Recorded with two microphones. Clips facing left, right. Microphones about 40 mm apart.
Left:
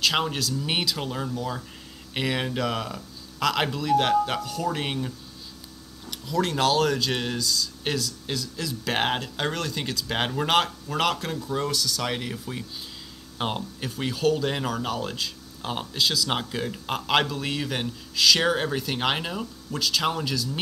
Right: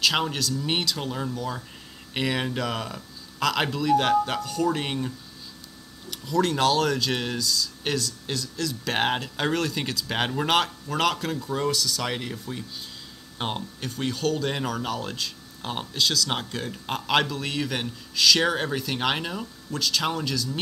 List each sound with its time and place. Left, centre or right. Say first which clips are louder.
0.0 s speech: even; centre